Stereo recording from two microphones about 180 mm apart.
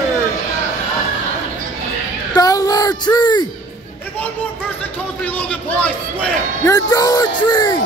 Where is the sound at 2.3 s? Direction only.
20° left (ahead or behind).